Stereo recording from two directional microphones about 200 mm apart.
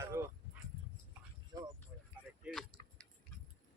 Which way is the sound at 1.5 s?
20° right (ahead or behind).